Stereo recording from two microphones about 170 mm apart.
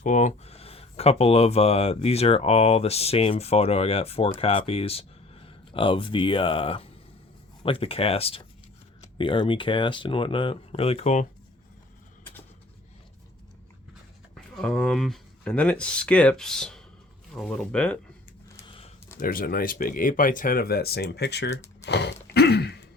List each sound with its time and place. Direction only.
0.0 s speech: 45° left (ahead or behind)
14.5 s speech: 5° left (ahead or behind)
19.2 s speech: 55° left (ahead or behind); by 21.6 s 85° left
21.8 s a sound: 85° left